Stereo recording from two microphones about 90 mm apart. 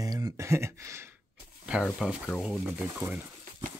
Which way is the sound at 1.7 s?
10° right (ahead or behind).